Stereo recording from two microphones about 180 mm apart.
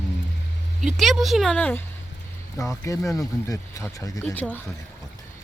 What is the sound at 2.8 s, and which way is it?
Speech, 15° left (ahead or behind).